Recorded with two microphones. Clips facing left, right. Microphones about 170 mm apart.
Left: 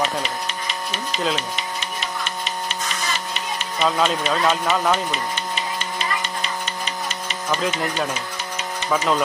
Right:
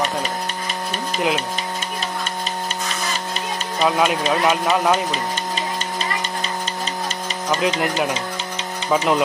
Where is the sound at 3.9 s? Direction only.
15° right (ahead or behind).